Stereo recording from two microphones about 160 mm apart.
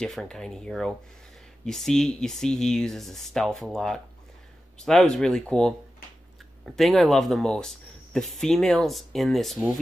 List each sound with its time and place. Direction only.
0.0 s speech: 5° left (ahead or behind)